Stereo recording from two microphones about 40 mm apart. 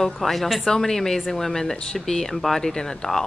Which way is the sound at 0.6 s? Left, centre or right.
Centre.